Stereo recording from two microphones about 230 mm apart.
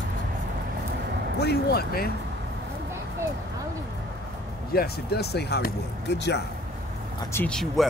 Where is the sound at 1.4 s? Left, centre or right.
Left.